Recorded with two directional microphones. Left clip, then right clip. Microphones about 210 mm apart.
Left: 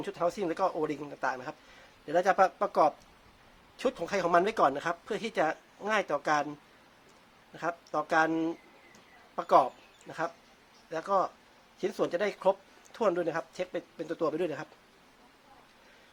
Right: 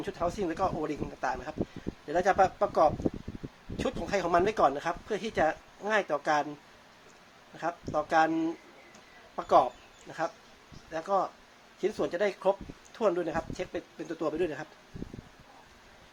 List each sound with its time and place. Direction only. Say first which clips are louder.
0.0 s speech: left 1 dB; 20° left (ahead or behind)
7.5 s speech: right 1 dB; 20° left (ahead or behind)